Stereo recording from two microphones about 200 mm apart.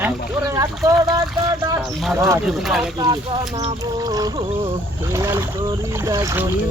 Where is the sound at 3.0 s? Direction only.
20° right (ahead or behind).